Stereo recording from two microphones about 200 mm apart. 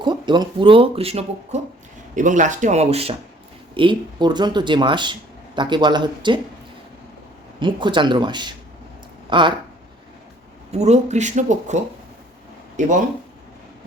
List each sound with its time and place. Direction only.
0.0 s speech: 20° right (ahead or behind)
2.1 s speech: 40° right (ahead or behind); by 6.4 s 25° right (ahead or behind)
7.6 s speech: 25° right (ahead or behind)
10.7 s speech: 35° right (ahead or behind)
12.8 s speech: 40° right (ahead or behind)